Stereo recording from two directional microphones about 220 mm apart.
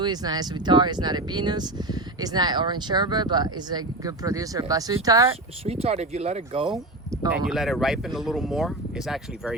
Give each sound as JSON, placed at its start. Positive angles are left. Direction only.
{"t": 0.0, "sound": "speech", "side_deg": -20}
{"t": 5.6, "sound": "speech", "side_deg": -30}
{"t": 7.1, "sound": "speech", "side_deg": -15}
{"t": 7.4, "sound": "speech", "side_deg": 0}